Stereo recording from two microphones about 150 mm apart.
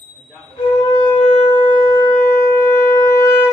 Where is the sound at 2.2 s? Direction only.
70° left (ahead or behind).